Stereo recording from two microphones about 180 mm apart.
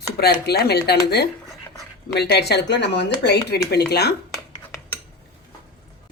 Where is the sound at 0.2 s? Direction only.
65° left (ahead or behind).